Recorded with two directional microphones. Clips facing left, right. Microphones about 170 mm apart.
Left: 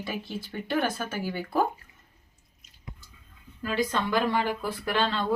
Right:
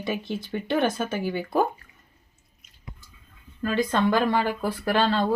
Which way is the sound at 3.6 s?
50° right (ahead or behind).